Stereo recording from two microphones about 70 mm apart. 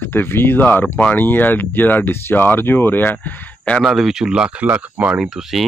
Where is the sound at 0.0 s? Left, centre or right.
Left.